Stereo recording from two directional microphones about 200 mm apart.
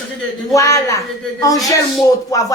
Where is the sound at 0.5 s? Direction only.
15° left (ahead or behind).